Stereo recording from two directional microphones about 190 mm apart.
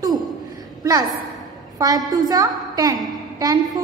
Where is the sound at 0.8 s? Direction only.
20° right (ahead or behind).